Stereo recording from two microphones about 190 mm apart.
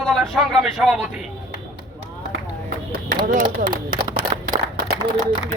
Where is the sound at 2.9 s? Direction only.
50° right (ahead or behind).